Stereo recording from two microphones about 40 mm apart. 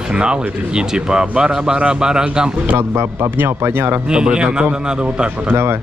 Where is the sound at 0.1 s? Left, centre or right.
Right.